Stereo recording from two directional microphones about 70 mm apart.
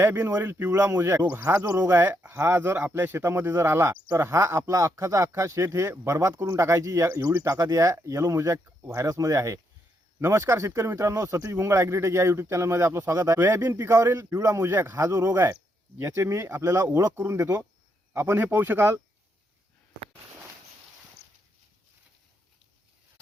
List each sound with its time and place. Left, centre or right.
0.0 s speech: right
1.2 s speech: right
1.5 s speech: right
9.0 s speech: right
16.6 s speech: right